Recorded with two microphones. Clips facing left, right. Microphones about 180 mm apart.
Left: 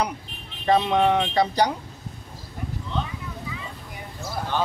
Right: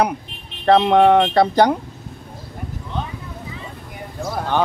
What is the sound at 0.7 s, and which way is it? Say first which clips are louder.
Speech: right 7 dB; 60° right (ahead or behind).